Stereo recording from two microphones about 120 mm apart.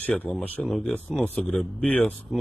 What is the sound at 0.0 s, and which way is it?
Speech, 15° left (ahead or behind).